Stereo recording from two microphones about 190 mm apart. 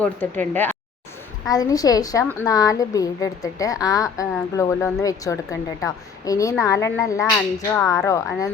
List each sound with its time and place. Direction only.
0.0 s a woman's voice: 10° left (ahead or behind)